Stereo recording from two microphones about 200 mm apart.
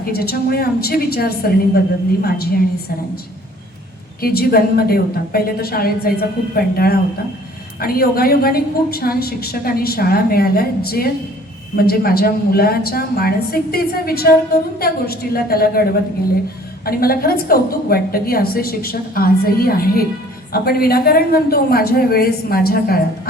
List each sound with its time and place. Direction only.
0.0 s a woman's voice: 50° left (ahead or behind)
4.2 s a woman's voice: 50° left (ahead or behind)